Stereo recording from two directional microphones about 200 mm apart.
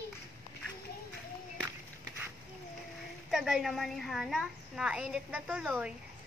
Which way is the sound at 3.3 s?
Centre (ahead or behind).